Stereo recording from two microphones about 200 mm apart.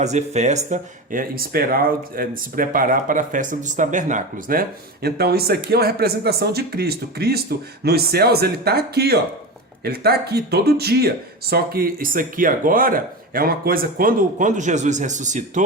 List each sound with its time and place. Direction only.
0.0 s speech: 35° right (ahead or behind)